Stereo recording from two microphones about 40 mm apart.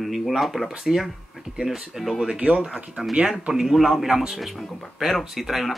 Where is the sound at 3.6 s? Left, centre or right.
Centre.